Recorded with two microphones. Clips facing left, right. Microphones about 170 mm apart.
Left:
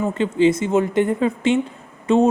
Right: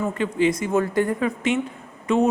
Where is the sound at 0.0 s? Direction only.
25° left (ahead or behind).